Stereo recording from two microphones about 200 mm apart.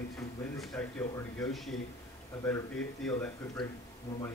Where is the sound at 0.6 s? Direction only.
5° left (ahead or behind).